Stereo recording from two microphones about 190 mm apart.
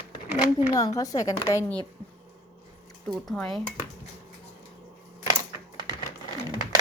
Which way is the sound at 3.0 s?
Centre (ahead or behind).